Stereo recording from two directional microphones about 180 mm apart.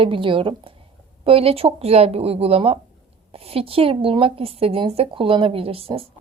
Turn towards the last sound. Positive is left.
turn(degrees=-30)  # may be behind; listen again after turning